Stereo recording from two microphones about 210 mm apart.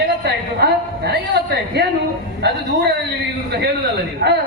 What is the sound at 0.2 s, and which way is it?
A woman's voice, 50° right (ahead or behind).